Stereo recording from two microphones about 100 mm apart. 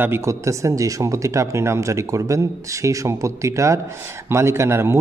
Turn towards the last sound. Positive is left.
turn(degrees=-25)  # may be behind; listen again after turning